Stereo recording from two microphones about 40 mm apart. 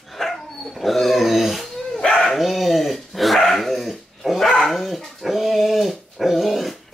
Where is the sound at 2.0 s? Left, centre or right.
Centre.